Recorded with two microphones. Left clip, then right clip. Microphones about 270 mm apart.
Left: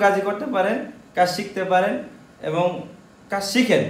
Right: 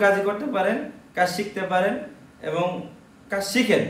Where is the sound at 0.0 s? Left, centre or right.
Centre.